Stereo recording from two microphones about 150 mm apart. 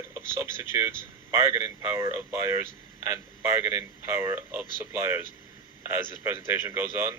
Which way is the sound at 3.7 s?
20° right (ahead or behind).